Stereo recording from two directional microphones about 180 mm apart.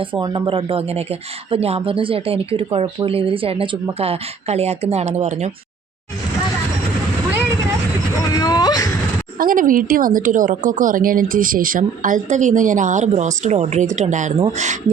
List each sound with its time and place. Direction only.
0.0 s a woman's voice: 25° right (ahead or behind)
8.3 s whimper: 20° left (ahead or behind)
9.4 s a woman's voice: 50° right (ahead or behind)